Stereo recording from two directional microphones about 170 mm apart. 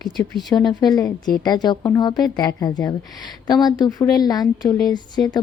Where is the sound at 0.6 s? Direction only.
25° left (ahead or behind).